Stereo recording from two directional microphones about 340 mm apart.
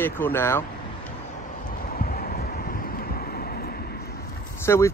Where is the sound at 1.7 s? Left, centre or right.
Left.